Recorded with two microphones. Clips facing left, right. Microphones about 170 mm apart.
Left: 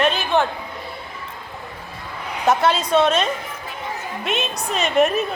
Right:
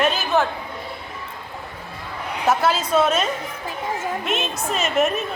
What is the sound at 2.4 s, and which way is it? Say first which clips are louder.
A woman's voice: left 2 dB; 5° right (ahead or behind).